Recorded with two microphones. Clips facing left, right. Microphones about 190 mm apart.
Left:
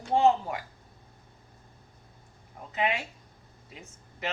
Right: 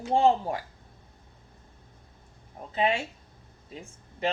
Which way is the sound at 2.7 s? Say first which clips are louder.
Right 3 dB; 30° right (ahead or behind).